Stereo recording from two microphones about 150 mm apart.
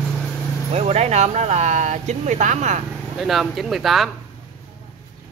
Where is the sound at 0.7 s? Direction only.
45° right (ahead or behind).